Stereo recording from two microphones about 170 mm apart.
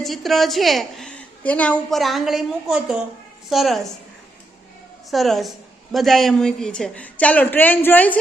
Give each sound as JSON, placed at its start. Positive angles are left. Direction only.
{"t": 0.0, "sound": "a woman's voice", "side_deg": 0}
{"t": 5.1, "sound": "a woman's voice", "side_deg": 0}